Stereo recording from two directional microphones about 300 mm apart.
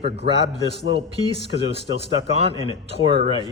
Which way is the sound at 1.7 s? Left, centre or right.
Centre.